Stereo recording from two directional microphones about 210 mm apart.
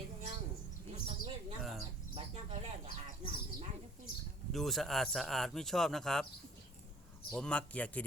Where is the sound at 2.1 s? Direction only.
30° right (ahead or behind).